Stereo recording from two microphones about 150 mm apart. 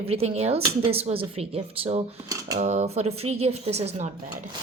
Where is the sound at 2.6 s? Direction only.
50° right (ahead or behind).